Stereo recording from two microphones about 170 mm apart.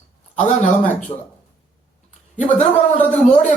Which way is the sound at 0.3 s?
45° left (ahead or behind).